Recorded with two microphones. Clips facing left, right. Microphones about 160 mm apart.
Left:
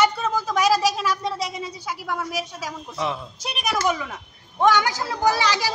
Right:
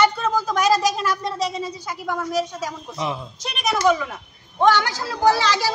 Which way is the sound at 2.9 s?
15° right (ahead or behind).